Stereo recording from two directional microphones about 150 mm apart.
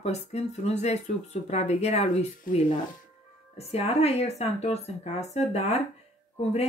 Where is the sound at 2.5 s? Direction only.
70° left (ahead or behind).